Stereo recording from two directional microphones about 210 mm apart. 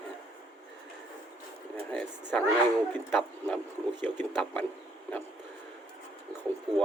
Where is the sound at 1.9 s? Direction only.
5° left (ahead or behind).